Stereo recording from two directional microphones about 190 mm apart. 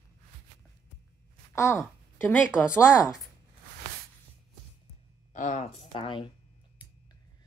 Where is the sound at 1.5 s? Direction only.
15° left (ahead or behind).